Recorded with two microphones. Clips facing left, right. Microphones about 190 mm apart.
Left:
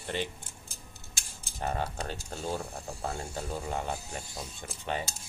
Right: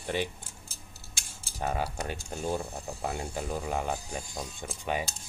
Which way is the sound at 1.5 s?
10° right (ahead or behind).